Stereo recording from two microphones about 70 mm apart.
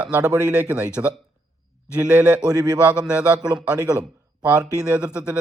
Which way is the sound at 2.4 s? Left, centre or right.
Right.